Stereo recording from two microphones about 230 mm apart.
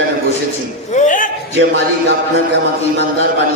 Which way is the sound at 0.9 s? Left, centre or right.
Left.